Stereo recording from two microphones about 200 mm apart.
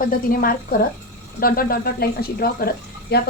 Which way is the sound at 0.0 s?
45° left (ahead or behind).